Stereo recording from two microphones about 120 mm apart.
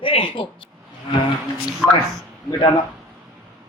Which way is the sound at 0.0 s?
50° left (ahead or behind).